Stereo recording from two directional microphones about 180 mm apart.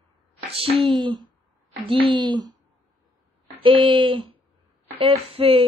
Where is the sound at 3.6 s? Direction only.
30° right (ahead or behind).